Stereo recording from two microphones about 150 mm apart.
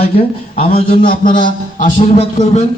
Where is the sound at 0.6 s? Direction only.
35° left (ahead or behind).